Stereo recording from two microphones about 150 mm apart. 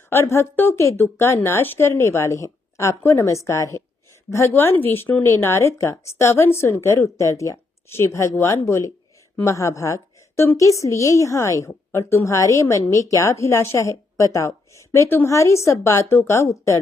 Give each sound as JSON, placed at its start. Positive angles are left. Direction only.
{"t": 0.1, "sound": "a woman's voice", "side_deg": 20}